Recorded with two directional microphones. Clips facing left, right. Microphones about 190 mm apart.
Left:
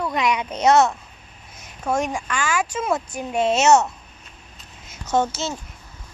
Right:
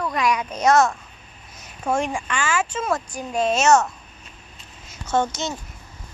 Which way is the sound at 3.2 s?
25° left (ahead or behind).